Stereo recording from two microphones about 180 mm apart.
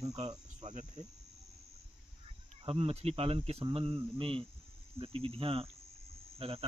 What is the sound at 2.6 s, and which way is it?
Speech, 35° right (ahead or behind).